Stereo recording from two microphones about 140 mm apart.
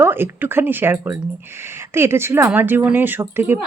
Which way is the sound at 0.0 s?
15° right (ahead or behind).